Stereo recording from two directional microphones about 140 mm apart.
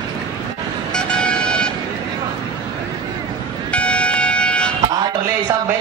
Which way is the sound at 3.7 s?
10° left (ahead or behind).